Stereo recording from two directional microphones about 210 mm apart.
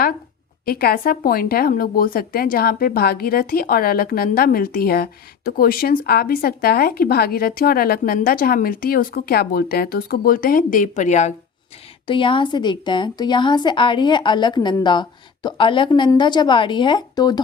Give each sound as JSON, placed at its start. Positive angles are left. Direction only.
{"t": 0.6, "sound": "speech", "side_deg": 45}
{"t": 12.0, "sound": "a woman's voice", "side_deg": 25}